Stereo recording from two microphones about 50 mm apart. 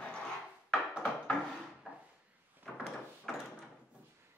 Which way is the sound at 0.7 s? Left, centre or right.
Centre.